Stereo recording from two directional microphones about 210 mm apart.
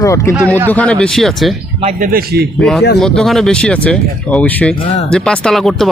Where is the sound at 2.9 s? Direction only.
Centre (ahead or behind).